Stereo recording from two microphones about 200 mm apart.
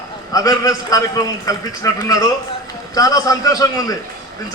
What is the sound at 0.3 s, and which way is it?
A man's voice, 15° left (ahead or behind).